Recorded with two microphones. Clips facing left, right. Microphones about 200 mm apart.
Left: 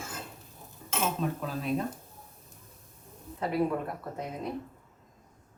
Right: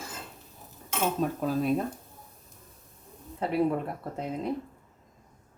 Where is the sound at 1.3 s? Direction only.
45° right (ahead or behind).